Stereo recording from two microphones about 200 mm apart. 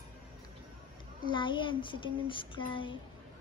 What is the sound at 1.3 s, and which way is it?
Speech, 25° left (ahead or behind).